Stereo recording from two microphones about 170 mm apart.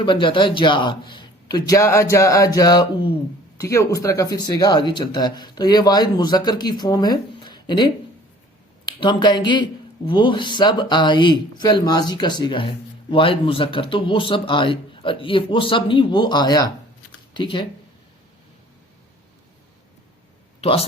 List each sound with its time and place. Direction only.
0.0 s speech: 30° left (ahead or behind)
9.0 s speech: 25° left (ahead or behind)
20.6 s speech: 35° left (ahead or behind)